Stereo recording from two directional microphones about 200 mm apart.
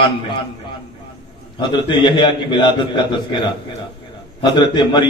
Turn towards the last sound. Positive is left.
turn(degrees=25)  # may be behind; listen again after turning